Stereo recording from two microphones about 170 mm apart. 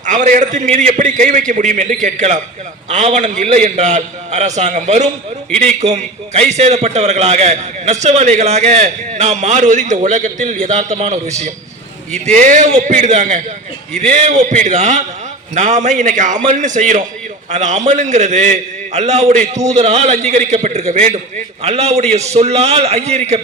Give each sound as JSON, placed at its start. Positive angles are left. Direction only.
{"t": 0.0, "sound": "a man's voice", "side_deg": -45}